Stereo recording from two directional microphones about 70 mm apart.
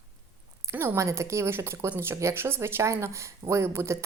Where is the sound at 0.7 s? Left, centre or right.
Right.